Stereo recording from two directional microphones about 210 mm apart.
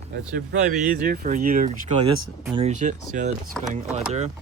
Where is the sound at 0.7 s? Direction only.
40° right (ahead or behind).